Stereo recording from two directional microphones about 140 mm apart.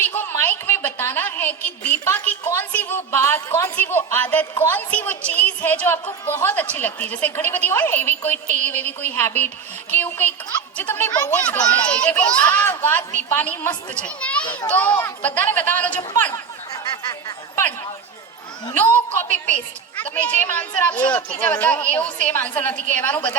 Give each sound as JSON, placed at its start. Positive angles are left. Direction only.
{"t": 0.0, "sound": "a woman's voice", "side_deg": 15}
{"t": 10.8, "sound": "a child's voice", "side_deg": 15}
{"t": 14.4, "sound": "a child's voice", "side_deg": 35}
{"t": 14.7, "sound": "a child's voice", "side_deg": 10}
{"t": 17.5, "sound": "chatter", "side_deg": 15}
{"t": 18.7, "sound": "a child's voice", "side_deg": 15}